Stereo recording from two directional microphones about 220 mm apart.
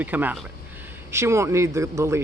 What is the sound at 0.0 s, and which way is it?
Speech, 10° right (ahead or behind).